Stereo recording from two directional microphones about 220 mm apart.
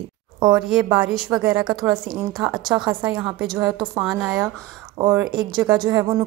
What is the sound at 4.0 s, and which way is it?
A woman's voice, 5° right (ahead or behind).